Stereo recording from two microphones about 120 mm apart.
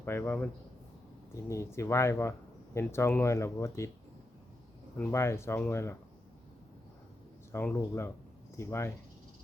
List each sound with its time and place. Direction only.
0.0 s speech: 20° left (ahead or behind)
5.1 s speech: 20° left (ahead or behind)
7.5 s speech: 15° left (ahead or behind)